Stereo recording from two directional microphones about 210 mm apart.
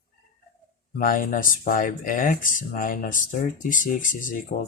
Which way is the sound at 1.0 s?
40° left (ahead or behind).